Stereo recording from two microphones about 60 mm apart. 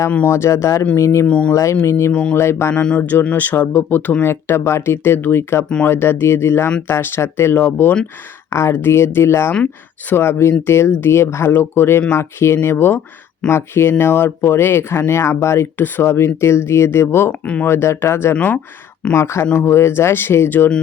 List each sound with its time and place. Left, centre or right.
0.3 s speech: left
1.3 s speech: left
1.8 s speech: left
3.0 s speech: left
8.4 s speech: left
17.4 s speech: centre
17.7 s speech: left
18.3 s speech: left
19.1 s speech: left